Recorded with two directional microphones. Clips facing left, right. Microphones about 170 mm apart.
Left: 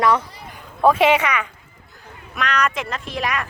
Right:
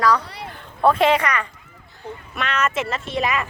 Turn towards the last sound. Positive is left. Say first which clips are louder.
# right 2 dB
turn(degrees=0)  # may be behind; listen again after turning